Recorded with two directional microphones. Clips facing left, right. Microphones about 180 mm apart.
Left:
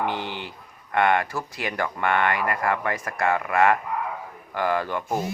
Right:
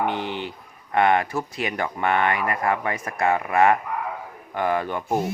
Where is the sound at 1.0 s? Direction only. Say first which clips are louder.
Right 2 dB; 20° right (ahead or behind).